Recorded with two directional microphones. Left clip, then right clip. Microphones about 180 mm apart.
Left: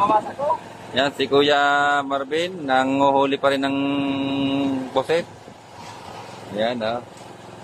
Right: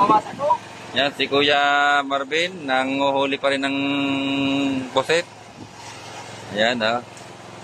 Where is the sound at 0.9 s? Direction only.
30° left (ahead or behind); by 5.3 s 10° left (ahead or behind).